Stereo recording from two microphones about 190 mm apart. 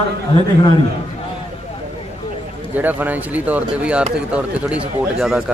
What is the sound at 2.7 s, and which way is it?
A man's voice, 10° right (ahead or behind).